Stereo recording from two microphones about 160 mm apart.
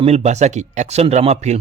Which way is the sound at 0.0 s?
45° right (ahead or behind).